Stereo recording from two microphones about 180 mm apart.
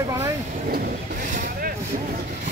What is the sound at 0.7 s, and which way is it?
Speech, 50° right (ahead or behind).